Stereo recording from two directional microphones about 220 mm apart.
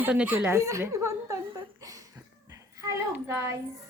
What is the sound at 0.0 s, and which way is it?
Speech, 5° right (ahead or behind).